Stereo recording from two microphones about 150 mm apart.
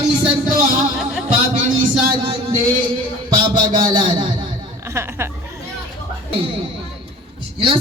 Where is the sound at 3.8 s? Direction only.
30° right (ahead or behind).